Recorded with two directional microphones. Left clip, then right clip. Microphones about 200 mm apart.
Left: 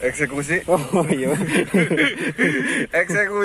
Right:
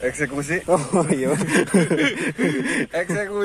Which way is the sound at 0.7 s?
10° right (ahead or behind).